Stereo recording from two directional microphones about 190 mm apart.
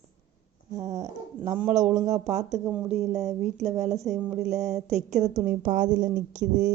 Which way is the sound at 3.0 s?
Centre (ahead or behind).